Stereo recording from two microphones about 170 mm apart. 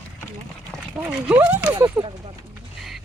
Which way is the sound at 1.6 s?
25° right (ahead or behind).